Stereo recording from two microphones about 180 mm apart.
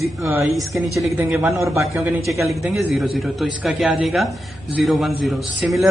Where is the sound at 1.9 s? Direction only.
Centre (ahead or behind).